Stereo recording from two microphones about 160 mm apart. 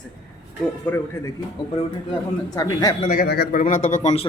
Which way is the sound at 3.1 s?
75° left (ahead or behind).